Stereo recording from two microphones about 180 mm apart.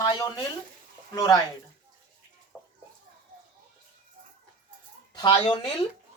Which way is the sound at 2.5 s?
5° right (ahead or behind).